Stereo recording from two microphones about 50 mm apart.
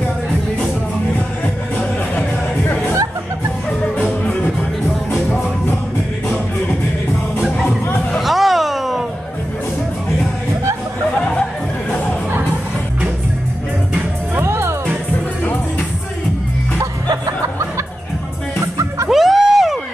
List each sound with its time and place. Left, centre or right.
3.9 s music: left
8.2 s a sound: centre
14.4 s music: right
19.0 s music: centre